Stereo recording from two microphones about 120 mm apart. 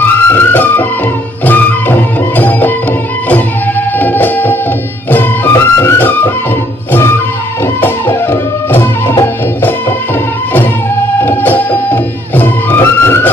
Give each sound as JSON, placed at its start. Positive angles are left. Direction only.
{"t": 0.0, "sound": "music", "side_deg": 15}
{"t": 4.0, "sound": "music", "side_deg": 15}
{"t": 11.2, "sound": "music", "side_deg": 15}